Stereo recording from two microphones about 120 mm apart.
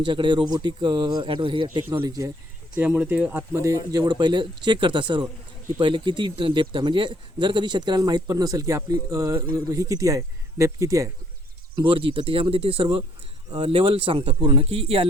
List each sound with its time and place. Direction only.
0.0 s speech: 40° right (ahead or behind)
1.9 s speech: 30° right (ahead or behind)
2.8 s speech: 15° right (ahead or behind)
3.9 s speech: 35° right (ahead or behind)
5.2 s a sound: 30° right (ahead or behind)
5.8 s speech: 40° right (ahead or behind); by 11.1 s 25° right (ahead or behind)
11.9 s speech: 45° right (ahead or behind)